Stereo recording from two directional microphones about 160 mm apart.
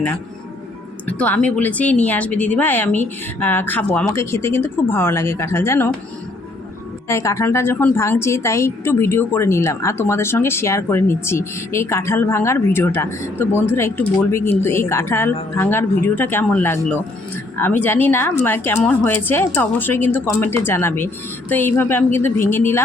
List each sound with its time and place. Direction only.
1.0 s speech: 10° left (ahead or behind)
7.1 s speech: 20° left (ahead or behind)